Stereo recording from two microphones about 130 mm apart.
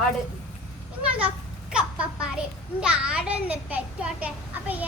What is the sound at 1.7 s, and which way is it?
A child's voice, 5° right (ahead or behind).